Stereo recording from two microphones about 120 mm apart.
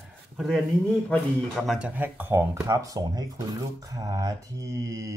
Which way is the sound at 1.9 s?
15° right (ahead or behind).